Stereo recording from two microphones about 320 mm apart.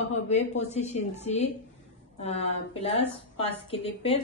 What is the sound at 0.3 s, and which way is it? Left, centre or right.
A woman's voice, left.